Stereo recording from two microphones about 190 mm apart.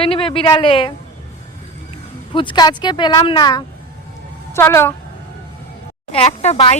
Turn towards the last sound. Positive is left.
turn(degrees=30)  # may be behind; listen again after turning